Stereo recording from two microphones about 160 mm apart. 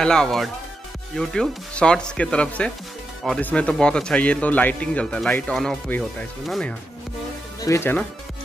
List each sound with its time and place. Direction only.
0.0 s speech: 5° left (ahead or behind)
7.6 s speech: 15° left (ahead or behind)